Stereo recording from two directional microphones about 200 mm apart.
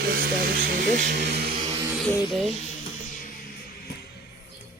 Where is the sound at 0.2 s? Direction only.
50° right (ahead or behind).